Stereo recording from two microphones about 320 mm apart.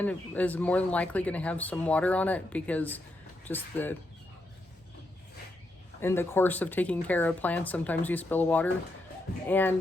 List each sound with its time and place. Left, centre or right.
0.0 s speech: centre
6.0 s speech: centre